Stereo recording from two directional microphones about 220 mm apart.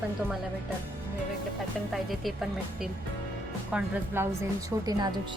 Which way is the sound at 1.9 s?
Centre (ahead or behind).